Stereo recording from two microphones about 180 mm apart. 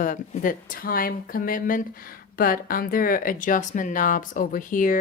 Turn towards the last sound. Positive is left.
turn(degrees=45)  # may be behind; listen again after turning